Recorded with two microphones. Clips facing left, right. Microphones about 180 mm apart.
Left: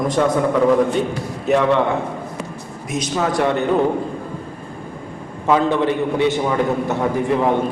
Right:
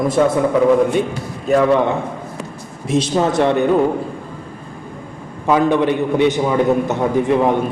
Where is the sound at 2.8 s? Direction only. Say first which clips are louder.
Right 5 dB; 30° right (ahead or behind).